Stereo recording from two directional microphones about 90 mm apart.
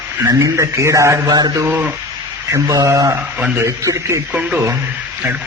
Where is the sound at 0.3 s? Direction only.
35° right (ahead or behind).